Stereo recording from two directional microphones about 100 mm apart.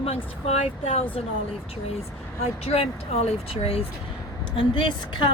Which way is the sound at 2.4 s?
90° left.